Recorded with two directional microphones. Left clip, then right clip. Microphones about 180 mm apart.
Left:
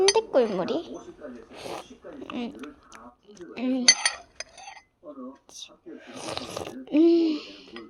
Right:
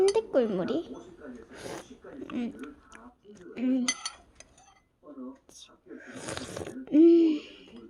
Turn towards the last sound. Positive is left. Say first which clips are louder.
# right 1 dB
turn(degrees=-40)  # may be behind; listen again after turning